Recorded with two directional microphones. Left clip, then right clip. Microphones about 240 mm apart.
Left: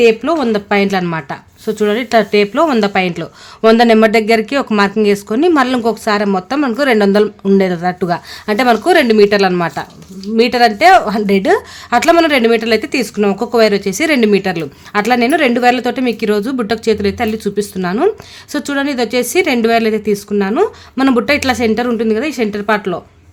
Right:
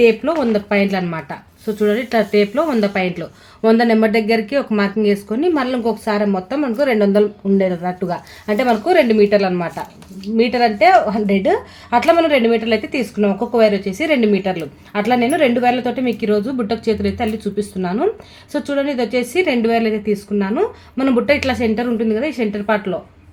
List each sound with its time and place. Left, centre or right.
0.0 s a woman's voice: left